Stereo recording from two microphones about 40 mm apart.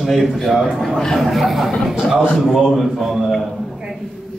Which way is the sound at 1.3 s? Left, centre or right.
Centre.